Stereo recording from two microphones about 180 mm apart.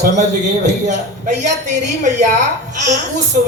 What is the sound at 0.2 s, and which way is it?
A man's voice, 40° right (ahead or behind).